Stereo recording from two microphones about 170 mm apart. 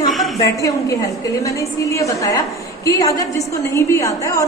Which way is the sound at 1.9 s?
20° left (ahead or behind).